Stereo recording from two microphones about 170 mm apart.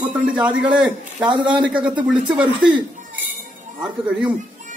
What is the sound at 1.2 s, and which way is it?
Speech, 25° right (ahead or behind).